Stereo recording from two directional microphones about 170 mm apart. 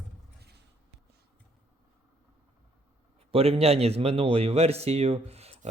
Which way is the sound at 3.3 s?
35° right (ahead or behind).